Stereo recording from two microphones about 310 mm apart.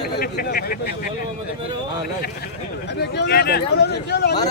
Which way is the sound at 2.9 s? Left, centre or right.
Left.